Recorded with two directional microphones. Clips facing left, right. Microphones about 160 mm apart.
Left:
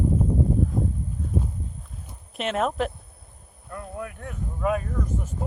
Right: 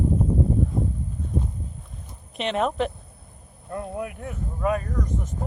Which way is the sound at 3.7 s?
20° right (ahead or behind).